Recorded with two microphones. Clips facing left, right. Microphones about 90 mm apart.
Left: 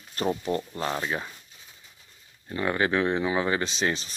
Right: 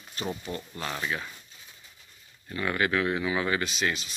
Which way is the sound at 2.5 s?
30° left (ahead or behind).